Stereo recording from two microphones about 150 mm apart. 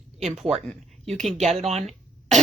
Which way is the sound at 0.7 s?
5° left (ahead or behind).